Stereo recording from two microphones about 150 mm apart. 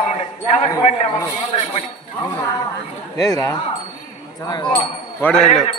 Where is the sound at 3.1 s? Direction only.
25° left (ahead or behind).